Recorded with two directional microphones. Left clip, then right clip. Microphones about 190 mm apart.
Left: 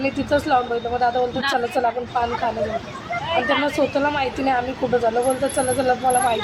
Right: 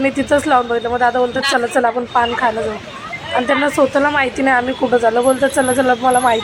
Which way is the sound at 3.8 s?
15° right (ahead or behind).